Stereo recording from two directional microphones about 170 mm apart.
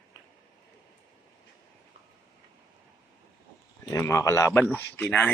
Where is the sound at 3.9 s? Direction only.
20° left (ahead or behind).